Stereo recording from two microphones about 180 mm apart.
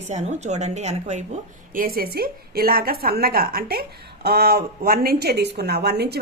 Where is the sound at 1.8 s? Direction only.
55° right (ahead or behind).